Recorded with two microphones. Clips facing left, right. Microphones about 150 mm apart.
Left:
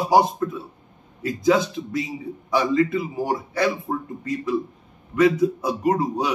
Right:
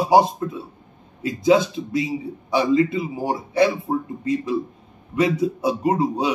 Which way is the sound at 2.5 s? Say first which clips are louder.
Right 2 dB; 25° right (ahead or behind).